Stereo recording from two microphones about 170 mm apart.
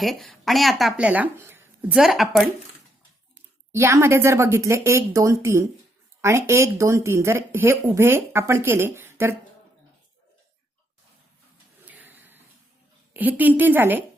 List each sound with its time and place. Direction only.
0.0 s speech: centre (ahead or behind)
2.0 s speech: centre (ahead or behind)
3.3 s speech: 15° right (ahead or behind)
11.9 s a sound: 10° right (ahead or behind)
13.1 s speech: 10° right (ahead or behind)